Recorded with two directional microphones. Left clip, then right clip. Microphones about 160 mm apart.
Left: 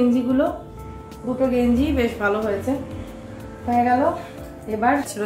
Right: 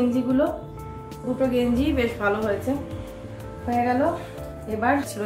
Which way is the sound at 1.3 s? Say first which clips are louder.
Left 2 dB; 15° right (ahead or behind).